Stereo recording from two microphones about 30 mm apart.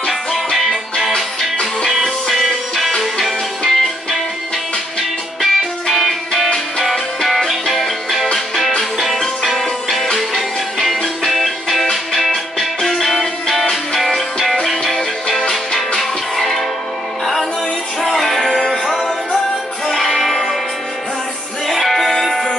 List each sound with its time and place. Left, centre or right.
0.1 s music: centre
1.1 s music: centre
3.0 s music: centre
5.4 s music: centre
10.1 s music: centre
16.0 s music: centre
18.0 s music: centre
20.2 s music: centre
21.6 s music: centre